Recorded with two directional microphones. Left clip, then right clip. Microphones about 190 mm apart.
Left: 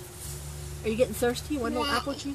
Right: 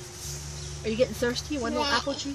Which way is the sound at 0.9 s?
40° left (ahead or behind).